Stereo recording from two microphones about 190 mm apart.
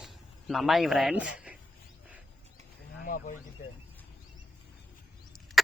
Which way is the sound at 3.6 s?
45° left (ahead or behind).